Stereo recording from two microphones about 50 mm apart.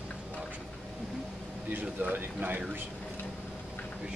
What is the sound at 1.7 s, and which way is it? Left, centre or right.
Speech, right.